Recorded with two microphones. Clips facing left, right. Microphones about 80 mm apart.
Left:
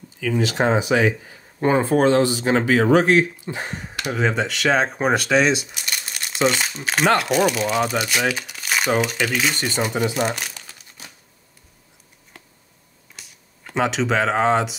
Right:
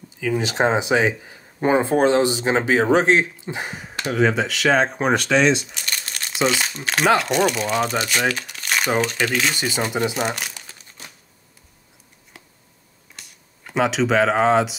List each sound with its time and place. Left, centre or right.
0.2 s speech: right
3.6 s speech: centre
13.1 s speech: centre